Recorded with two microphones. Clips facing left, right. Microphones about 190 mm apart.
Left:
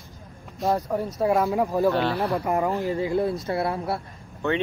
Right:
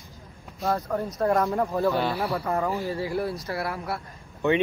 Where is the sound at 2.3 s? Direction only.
15° left (ahead or behind).